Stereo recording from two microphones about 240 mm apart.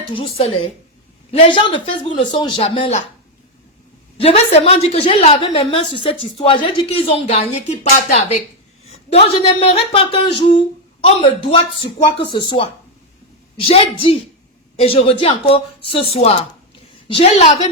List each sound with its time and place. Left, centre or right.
0.1 s a woman's voice: left
4.2 s a woman's voice: left
13.7 s a woman's voice: left